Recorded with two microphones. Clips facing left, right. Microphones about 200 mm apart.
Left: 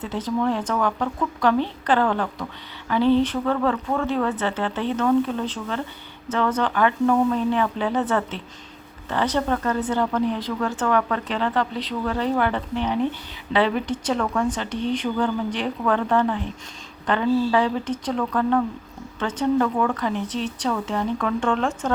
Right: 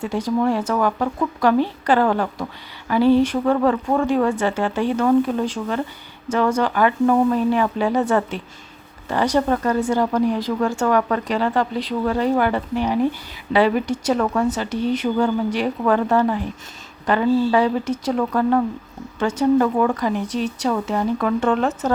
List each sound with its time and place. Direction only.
0.0 s speech: 10° right (ahead or behind)
10.8 s speech: 40° right (ahead or behind)
11.3 s speech: 10° right (ahead or behind)